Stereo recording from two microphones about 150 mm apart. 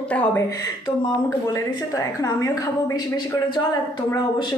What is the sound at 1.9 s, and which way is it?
Speech, 25° left (ahead or behind).